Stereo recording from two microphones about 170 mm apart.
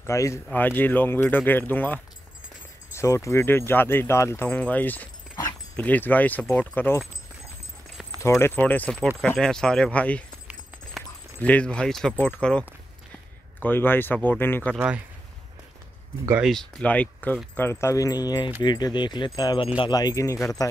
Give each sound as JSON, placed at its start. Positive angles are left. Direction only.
{"t": 0.0, "sound": "speech", "side_deg": 15}
{"t": 8.2, "sound": "speech", "side_deg": 15}
{"t": 11.3, "sound": "speech", "side_deg": 10}
{"t": 16.4, "sound": "speech", "side_deg": 5}